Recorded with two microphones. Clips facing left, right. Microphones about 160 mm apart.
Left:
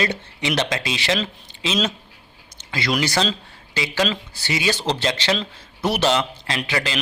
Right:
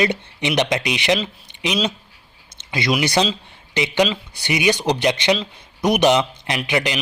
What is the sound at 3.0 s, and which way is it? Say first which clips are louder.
A man's voice: right 2 dB; 20° right (ahead or behind).